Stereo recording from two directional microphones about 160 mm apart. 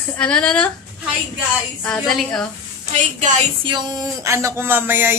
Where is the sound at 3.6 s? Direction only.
25° right (ahead or behind).